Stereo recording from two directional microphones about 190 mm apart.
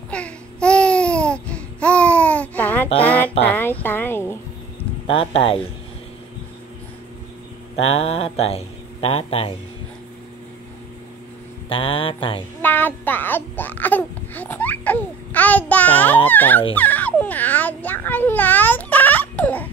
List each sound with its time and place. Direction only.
0.1 s babbling: 5° left (ahead or behind)
3.0 s music: 10° left (ahead or behind)
5.0 s speech: 30° left (ahead or behind)
7.8 s speech: 30° left (ahead or behind)
11.7 s speech: 30° left (ahead or behind)
12.6 s a sound: 10° left (ahead or behind)